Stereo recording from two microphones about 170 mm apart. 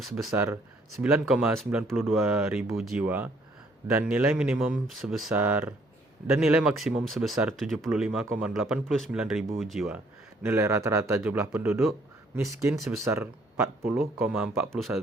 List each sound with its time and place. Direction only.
0.0 s speech: centre (ahead or behind)
0.3 s speech: 15° right (ahead or behind)
1.1 s speech: 5° right (ahead or behind)
10.4 s speech: 15° right (ahead or behind)
12.8 s speech: 15° right (ahead or behind)
13.8 s speech: centre (ahead or behind)